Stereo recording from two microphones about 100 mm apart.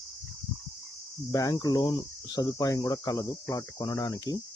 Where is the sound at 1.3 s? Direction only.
35° left (ahead or behind).